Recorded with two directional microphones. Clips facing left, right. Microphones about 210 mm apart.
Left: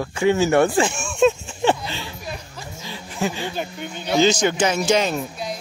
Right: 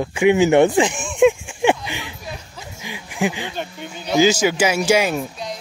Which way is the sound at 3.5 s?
Centre (ahead or behind).